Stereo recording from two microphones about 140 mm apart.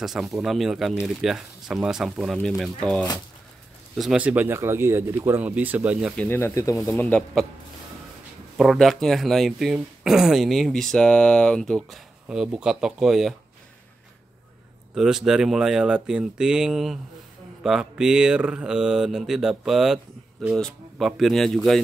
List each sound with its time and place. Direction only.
0.0 s speech: centre (ahead or behind)
6.1 s speech: 15° left (ahead or behind)
7.0 s speech: 10° left (ahead or behind)
8.5 s speech: centre (ahead or behind)
15.0 s speech: 5° right (ahead or behind)